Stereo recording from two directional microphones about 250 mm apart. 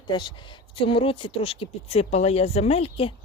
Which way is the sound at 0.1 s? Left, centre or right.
Centre.